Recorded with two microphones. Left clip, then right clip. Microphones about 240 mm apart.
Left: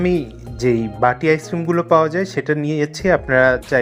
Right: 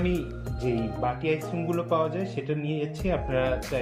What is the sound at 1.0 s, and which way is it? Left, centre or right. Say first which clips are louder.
Speech: left 13 dB; left.